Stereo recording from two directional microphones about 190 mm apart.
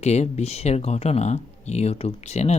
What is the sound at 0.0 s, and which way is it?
Speech, 35° left (ahead or behind).